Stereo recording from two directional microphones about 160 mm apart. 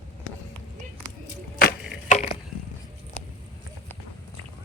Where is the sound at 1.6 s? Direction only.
65° left (ahead or behind).